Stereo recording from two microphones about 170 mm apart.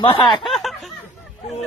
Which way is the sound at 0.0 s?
30° left (ahead or behind).